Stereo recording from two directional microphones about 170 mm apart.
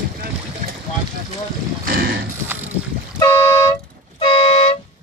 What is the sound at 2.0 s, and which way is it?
Horse, 65° right (ahead or behind).